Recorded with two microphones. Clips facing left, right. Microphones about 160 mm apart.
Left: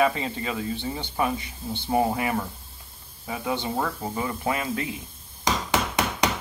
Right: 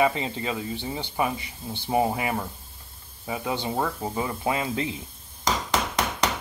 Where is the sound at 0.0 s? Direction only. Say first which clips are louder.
Even; 15° right (ahead or behind).